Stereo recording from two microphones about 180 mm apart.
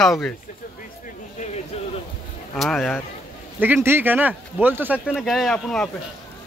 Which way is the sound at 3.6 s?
10° right (ahead or behind).